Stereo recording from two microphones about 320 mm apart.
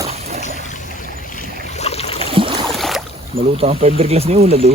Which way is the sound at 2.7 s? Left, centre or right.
Centre.